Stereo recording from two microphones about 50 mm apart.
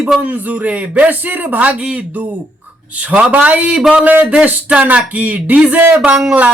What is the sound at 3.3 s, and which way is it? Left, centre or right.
Speech, right.